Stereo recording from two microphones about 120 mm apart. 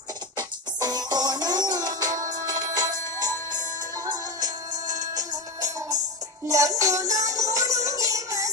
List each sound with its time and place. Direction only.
0.4 s music: 35° right (ahead or behind)
4.4 s music: 90° right
5.1 s music: 30° right (ahead or behind)